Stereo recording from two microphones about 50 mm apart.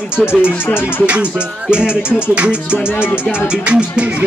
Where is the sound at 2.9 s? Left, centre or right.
Left.